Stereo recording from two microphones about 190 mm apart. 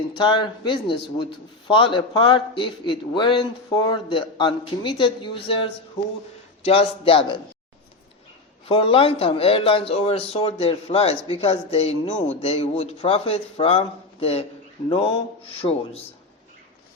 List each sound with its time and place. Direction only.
0.2 s a man's voice: 25° left (ahead or behind)
8.6 s a man's voice: 30° left (ahead or behind)